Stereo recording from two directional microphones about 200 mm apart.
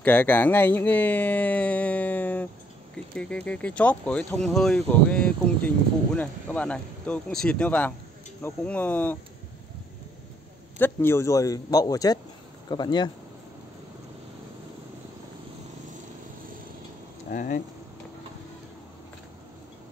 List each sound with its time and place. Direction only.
0.0 s speech: 10° left (ahead or behind)
10.8 s speech: 10° left (ahead or behind)
17.3 s speech: 40° left (ahead or behind)